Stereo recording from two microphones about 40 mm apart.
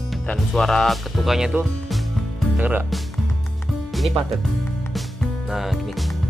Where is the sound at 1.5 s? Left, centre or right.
Right.